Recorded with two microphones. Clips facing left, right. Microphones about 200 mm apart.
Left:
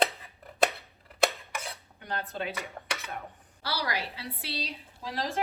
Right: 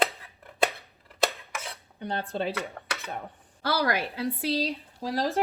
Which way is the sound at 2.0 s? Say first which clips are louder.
Right 5 dB; 30° right (ahead or behind).